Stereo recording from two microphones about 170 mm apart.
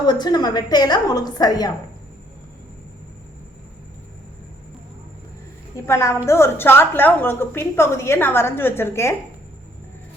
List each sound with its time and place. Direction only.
0.1 s a woman's voice: 25° left (ahead or behind)
5.7 s a woman's voice: 15° left (ahead or behind)